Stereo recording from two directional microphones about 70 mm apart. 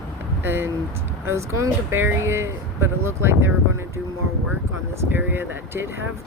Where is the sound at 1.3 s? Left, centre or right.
Right.